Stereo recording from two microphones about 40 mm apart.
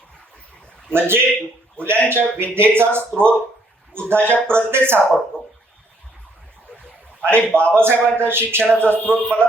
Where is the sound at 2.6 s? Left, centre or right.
Right.